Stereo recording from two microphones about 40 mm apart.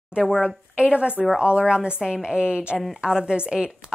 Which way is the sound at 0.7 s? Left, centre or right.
Right.